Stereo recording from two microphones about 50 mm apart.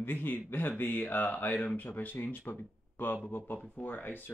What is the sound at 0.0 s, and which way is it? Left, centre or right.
Speech, left.